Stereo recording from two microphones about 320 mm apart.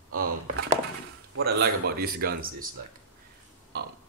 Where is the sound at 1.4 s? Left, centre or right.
Right.